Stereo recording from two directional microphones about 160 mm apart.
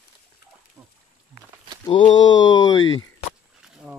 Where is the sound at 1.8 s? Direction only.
30° left (ahead or behind).